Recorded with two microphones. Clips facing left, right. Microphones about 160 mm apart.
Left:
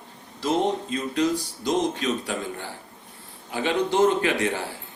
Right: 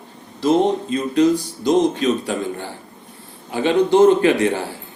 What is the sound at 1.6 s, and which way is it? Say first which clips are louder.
Speech: right 8 dB; 30° right (ahead or behind).